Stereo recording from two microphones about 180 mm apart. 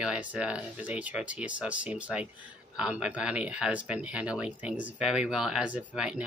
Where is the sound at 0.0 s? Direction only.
5° right (ahead or behind).